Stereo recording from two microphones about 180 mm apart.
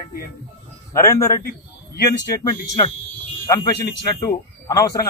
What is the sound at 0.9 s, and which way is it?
Speech, 15° left (ahead or behind).